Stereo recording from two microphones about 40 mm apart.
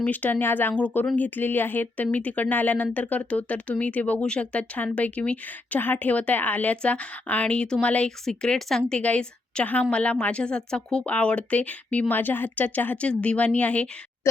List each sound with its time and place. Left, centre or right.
0.0 s a woman's voice: left
0.3 s speech: left
1.1 s speech: left
5.5 s a woman's voice: left
6.8 s speech: left
8.2 s speech: centre
9.0 s a woman's voice: left
11.0 s speech: left
12.1 s a woman's voice: left
13.0 s speech: left